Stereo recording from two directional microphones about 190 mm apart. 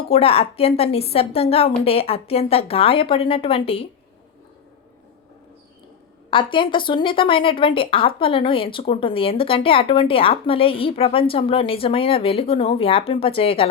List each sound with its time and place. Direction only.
0.1 s speech: 30° left (ahead or behind)
6.3 s a woman's voice: 25° left (ahead or behind)